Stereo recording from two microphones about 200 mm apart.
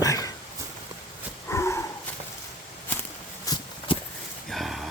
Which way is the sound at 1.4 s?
15° left (ahead or behind).